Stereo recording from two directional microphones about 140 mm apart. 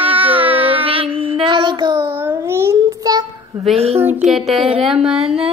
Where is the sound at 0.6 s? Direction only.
40° right (ahead or behind).